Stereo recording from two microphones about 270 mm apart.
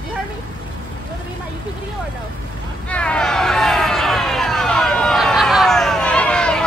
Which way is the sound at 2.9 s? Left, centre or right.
Centre.